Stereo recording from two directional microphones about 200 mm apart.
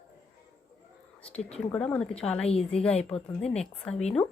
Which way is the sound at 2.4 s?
30° left (ahead or behind).